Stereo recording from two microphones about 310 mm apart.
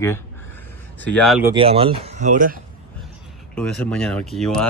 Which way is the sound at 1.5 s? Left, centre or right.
Centre.